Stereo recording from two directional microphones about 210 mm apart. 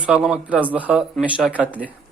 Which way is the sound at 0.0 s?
5° right (ahead or behind).